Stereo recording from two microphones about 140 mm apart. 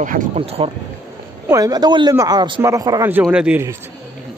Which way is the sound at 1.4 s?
25° right (ahead or behind).